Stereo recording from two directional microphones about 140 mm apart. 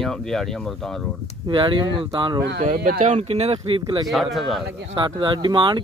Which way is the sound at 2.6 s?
65° right (ahead or behind).